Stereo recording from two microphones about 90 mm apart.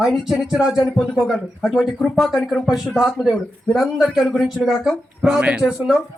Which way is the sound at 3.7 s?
5° right (ahead or behind).